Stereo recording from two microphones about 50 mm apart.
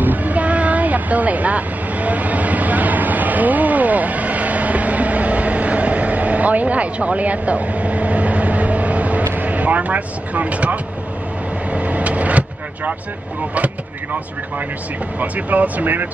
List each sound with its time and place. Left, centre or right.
0.0 s vehicle: right
9.3 s speech: right
11.7 s vehicle: right
15.1 s speech: right